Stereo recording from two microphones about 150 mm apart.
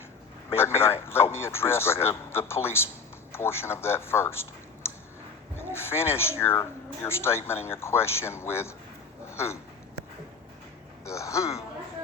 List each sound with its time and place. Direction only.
0.5 s speech: 15° left (ahead or behind)
11.0 s speech: 20° left (ahead or behind)